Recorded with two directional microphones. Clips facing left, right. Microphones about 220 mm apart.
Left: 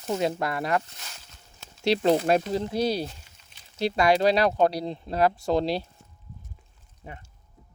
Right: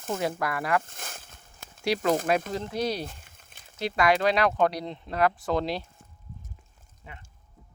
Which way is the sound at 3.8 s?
30° left (ahead or behind).